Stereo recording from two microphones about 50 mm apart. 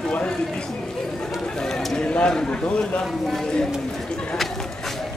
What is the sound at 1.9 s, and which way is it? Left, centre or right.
Speech, left.